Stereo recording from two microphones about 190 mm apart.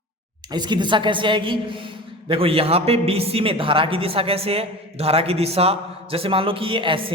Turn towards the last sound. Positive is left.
turn(degrees=-25)  # may be behind; listen again after turning